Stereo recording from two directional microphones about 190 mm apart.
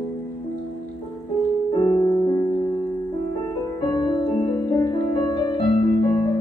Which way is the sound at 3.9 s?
20° left (ahead or behind).